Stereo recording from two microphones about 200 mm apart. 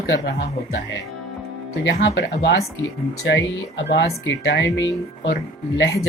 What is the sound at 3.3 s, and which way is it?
Speech, 65° left (ahead or behind).